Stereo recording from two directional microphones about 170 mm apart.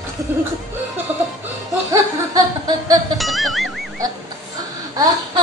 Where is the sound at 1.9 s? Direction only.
20° right (ahead or behind).